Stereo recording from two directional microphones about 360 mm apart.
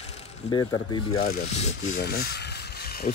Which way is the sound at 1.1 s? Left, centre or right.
Left.